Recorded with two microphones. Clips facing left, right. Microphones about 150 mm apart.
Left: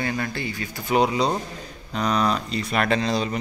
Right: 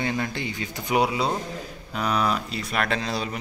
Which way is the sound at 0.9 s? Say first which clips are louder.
Left 2 dB; 5° right (ahead or behind).